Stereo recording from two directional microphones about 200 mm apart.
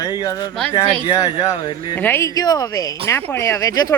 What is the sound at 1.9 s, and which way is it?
A man's voice, 10° left (ahead or behind).